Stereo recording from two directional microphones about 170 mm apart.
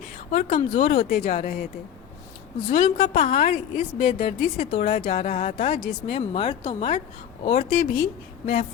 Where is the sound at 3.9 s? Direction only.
40° left (ahead or behind).